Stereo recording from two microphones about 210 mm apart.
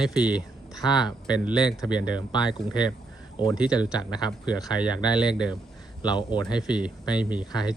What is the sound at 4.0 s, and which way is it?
Speech, 20° left (ahead or behind).